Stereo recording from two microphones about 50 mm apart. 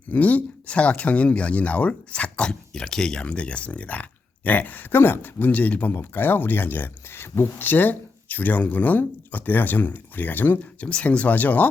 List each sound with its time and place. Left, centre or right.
0.1 s speech: left; by 3.2 s centre
3.2 s speech: left
5.9 s speech: left
10.8 s speech: left